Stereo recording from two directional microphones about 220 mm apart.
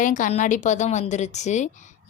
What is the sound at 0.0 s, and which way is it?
A woman's voice, 35° left (ahead or behind).